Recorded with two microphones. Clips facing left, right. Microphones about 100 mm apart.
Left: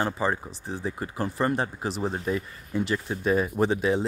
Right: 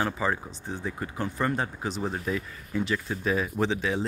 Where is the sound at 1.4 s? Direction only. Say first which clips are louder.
Left 2 dB; 30° left (ahead or behind).